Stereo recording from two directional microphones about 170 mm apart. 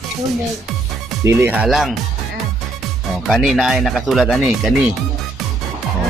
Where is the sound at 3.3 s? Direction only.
Centre (ahead or behind).